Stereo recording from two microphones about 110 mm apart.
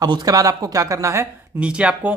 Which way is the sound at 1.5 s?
10° right (ahead or behind).